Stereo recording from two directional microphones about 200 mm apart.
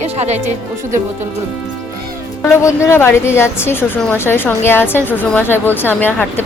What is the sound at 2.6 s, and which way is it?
A woman's voice, 15° left (ahead or behind).